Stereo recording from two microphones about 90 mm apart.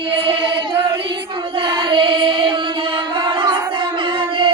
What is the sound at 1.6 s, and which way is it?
Singing, 65° right (ahead or behind).